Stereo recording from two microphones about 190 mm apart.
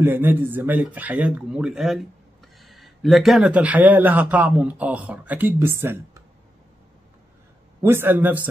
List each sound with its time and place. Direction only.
0.0 s speech: 10° right (ahead or behind)
7.8 s speech: 10° right (ahead or behind)